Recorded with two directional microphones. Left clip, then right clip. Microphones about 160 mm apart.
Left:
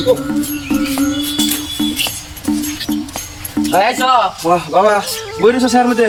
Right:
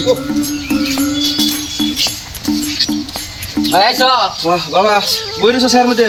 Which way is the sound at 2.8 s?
30° left (ahead or behind).